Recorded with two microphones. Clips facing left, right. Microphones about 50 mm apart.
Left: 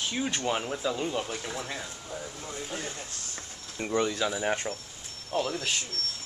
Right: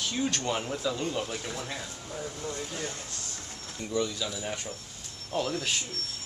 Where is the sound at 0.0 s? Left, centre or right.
Centre.